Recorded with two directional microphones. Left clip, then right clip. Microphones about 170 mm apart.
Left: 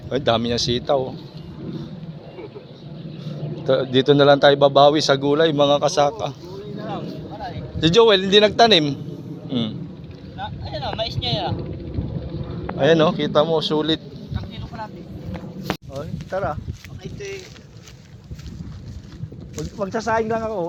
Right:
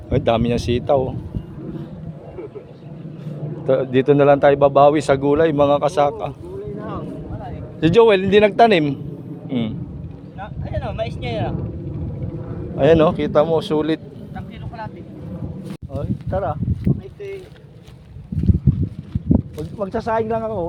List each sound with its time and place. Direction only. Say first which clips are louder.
0.1 s a man's voice: right 2 dB; 15° right (ahead or behind)
3.7 s a man's voice: right 1 dB; 5° right (ahead or behind)
4.7 s a man's voice: right 1 dB; 10° right (ahead or behind)
7.8 s a man's voice: right 1 dB; 20° right (ahead or behind)
9.5 s a man's voice: right 1 dB; 5° right (ahead or behind)
10.4 s vehicle: even; 35° right (ahead or behind)
12.7 s a man's voice: right 2 dB; 25° right (ahead or behind)
15.9 s a sound: right 2 dB; 10° left (ahead or behind)
16.8 s a sound: right 6 dB; 35° right (ahead or behind)
19.8 s speech: right 1 dB; 15° left (ahead or behind)